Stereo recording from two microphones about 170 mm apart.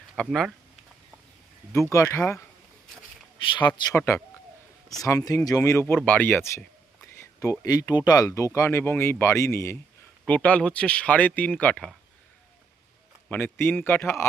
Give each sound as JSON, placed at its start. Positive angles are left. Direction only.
{"t": 0.2, "sound": "speech", "side_deg": 5}
{"t": 1.7, "sound": "speech", "side_deg": 15}
{"t": 3.4, "sound": "speech", "side_deg": 25}
{"t": 13.2, "sound": "speech", "side_deg": 10}